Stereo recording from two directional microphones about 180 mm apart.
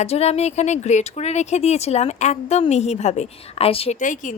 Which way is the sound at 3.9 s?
45° left (ahead or behind).